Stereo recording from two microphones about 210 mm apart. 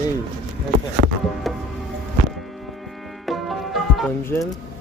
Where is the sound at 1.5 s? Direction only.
Centre (ahead or behind).